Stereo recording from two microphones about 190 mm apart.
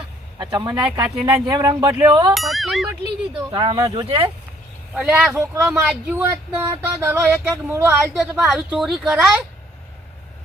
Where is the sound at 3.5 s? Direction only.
30° right (ahead or behind).